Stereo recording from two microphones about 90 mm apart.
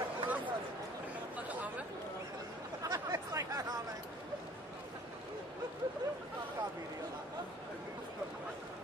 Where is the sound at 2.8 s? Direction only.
40° right (ahead or behind).